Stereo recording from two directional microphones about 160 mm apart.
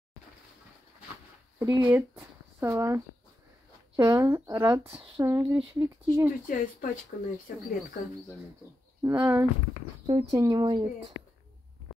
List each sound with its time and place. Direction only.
1.6 s speech: 20° right (ahead or behind)
1.9 s speech: 10° right (ahead or behind)
6.4 s speech: 55° left (ahead or behind)
7.1 s speech: 80° left
7.5 s speech: 60° left (ahead or behind)
9.0 s speech: 15° right (ahead or behind)